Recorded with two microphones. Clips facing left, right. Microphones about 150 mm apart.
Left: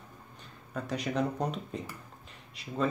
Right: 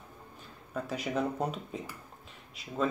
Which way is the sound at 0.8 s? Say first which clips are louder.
Left 1 dB; 5° right (ahead or behind).